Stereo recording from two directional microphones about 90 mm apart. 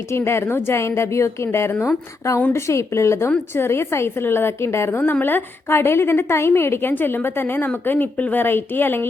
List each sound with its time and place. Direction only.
0.1 s a woman's voice: 30° left (ahead or behind)
1.7 s speech: 15° left (ahead or behind)
2.5 s a woman's voice: 30° left (ahead or behind)